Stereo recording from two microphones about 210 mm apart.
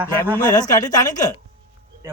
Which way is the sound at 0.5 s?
20° left (ahead or behind).